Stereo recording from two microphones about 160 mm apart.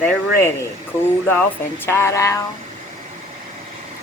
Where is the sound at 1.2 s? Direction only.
10° left (ahead or behind).